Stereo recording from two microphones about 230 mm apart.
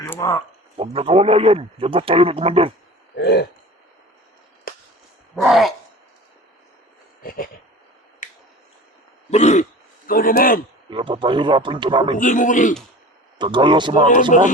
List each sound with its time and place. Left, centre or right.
0.1 s a sound: centre
0.8 s a man's voice: right
3.2 s a sound: left
4.7 s a sound: left
5.4 s speech: centre
7.2 s a sound: left
9.3 s throat clearing: left
10.1 s a man's voice: left
10.8 s a man's voice: right
12.2 s a man's voice: left
13.4 s a man's voice: centre
14.1 s a man's voice: left